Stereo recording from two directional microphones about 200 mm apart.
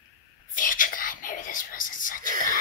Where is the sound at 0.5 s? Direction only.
40° left (ahead or behind).